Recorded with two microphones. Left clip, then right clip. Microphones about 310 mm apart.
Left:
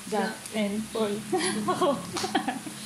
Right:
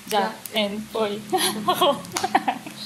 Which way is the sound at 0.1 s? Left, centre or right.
Right.